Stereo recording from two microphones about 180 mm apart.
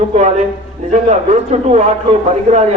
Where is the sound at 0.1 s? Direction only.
40° right (ahead or behind).